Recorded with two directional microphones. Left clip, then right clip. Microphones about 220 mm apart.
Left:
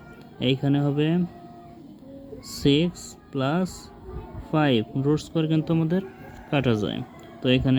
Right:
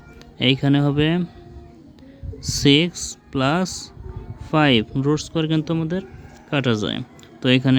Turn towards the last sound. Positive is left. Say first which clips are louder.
# right 4 dB
turn(degrees=-25)  # may be behind; listen again after turning